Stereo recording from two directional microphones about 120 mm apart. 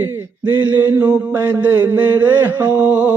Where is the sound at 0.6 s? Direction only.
15° right (ahead or behind).